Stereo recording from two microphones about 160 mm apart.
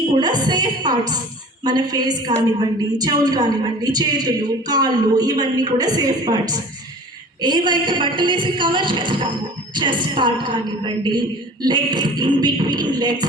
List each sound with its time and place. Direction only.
0.1 s a woman's voice: 25° right (ahead or behind)